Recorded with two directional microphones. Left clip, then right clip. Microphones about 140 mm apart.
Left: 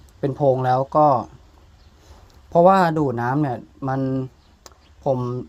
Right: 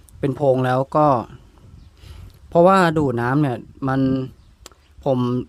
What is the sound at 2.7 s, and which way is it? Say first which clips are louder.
Speech: right 1 dB; 60° right (ahead or behind).